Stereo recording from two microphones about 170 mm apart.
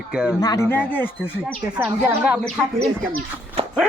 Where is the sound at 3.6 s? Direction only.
35° right (ahead or behind).